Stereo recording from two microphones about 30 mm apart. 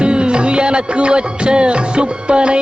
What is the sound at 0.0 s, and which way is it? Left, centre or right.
Music, right.